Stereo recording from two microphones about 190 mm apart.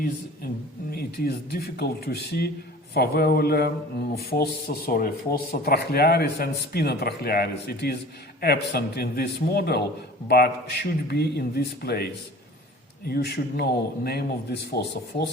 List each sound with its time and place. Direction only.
0.0 s speech: 50° left (ahead or behind)
13.1 s speech: 55° left (ahead or behind)